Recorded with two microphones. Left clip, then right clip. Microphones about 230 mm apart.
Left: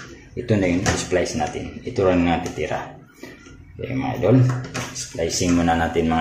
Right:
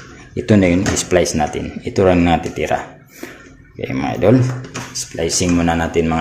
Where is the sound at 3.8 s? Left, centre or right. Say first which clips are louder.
Right 6 dB; right.